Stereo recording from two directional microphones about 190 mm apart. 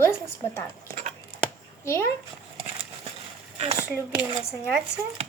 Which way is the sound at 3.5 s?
35° right (ahead or behind).